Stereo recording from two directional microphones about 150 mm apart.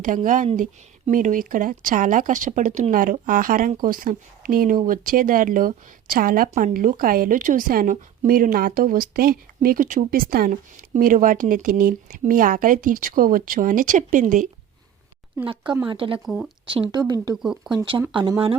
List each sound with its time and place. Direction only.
0.3 s speech: 60° right (ahead or behind)
2.9 s speech: 65° right (ahead or behind)
15.9 s speech: 35° right (ahead or behind)
16.2 s speech: 5° right (ahead or behind)
16.6 s speech: 35° right (ahead or behind)
17.4 s speech: 5° right (ahead or behind)
17.7 s speech: 30° right (ahead or behind)